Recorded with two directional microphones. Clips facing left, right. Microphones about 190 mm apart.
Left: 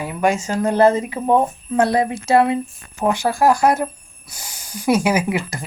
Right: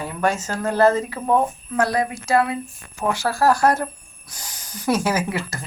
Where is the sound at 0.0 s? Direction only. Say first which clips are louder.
Left 3 dB; 10° left (ahead or behind).